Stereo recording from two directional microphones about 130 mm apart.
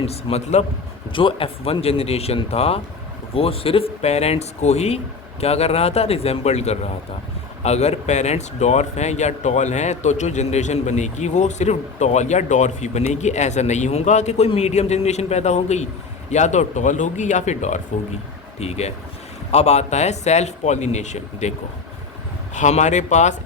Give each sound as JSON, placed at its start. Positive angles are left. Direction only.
{"t": 0.0, "sound": "speech", "side_deg": 50}
{"t": 22.5, "sound": "speech", "side_deg": 65}